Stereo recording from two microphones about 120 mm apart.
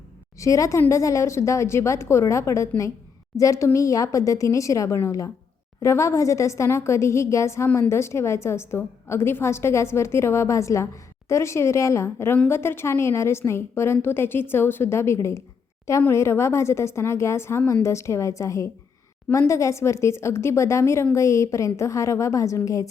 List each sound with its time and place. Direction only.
0.3 s a woman's voice: 25° left (ahead or behind)